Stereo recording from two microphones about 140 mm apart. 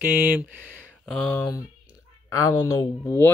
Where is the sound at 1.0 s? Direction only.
5° left (ahead or behind).